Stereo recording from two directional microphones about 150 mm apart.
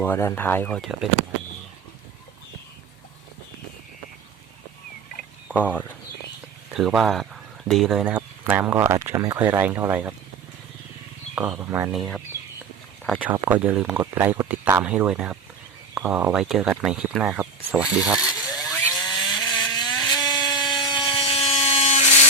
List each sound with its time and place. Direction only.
0.0 s speech: 15° left (ahead or behind)
5.5 s speech: 10° left (ahead or behind)
6.7 s speech: centre (ahead or behind)
11.3 s speech: 15° right (ahead or behind)
11.9 s speech: centre (ahead or behind)
13.1 s speech: 15° right (ahead or behind)
19.0 s a sound: 25° left (ahead or behind); by 21.8 s 40° left (ahead or behind)